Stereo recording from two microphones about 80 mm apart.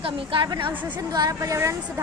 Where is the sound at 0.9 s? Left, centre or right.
Right.